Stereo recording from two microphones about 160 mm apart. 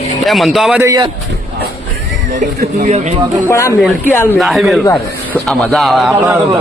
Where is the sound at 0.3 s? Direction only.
Centre (ahead or behind).